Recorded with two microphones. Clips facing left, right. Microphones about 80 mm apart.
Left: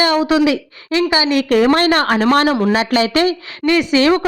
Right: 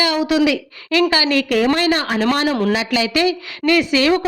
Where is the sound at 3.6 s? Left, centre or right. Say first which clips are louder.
Left 2 dB; left.